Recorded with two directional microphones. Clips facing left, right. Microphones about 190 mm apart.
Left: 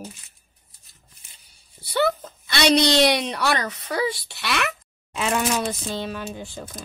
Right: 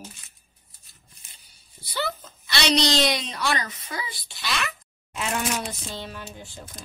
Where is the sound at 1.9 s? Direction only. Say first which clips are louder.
Left 8 dB; 60° left (ahead or behind).